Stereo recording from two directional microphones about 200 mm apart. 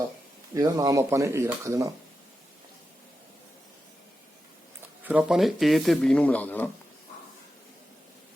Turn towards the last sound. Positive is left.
turn(degrees=10)  # may be behind; listen again after turning